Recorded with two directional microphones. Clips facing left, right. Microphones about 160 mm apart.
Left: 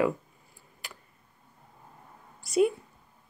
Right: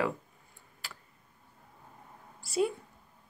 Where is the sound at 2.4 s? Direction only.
20° left (ahead or behind).